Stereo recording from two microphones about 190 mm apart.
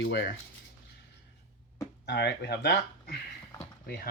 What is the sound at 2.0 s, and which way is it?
Speech, 65° left (ahead or behind).